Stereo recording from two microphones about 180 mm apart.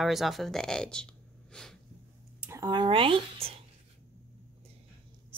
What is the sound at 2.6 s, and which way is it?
Speech, 25° right (ahead or behind).